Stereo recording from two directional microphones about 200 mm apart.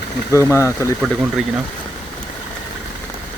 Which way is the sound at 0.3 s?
15° left (ahead or behind).